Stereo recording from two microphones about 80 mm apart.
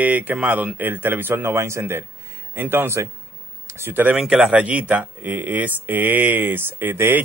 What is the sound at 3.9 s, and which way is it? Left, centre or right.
Speech, right.